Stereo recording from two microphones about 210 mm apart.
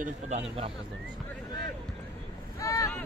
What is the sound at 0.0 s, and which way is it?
Speech, 35° right (ahead or behind).